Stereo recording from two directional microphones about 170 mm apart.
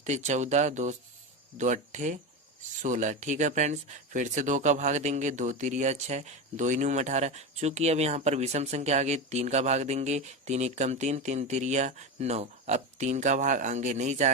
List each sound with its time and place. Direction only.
0.0 s speech: 45° right (ahead or behind)